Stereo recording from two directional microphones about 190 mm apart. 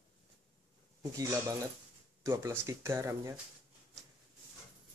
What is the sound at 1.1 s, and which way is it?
Speech, 15° right (ahead or behind).